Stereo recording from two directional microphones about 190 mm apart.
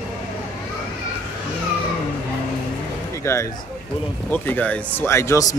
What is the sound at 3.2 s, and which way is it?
Speech, 15° left (ahead or behind).